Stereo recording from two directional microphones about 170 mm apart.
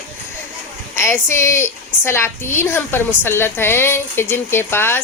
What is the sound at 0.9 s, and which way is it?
A woman's voice, 15° left (ahead or behind).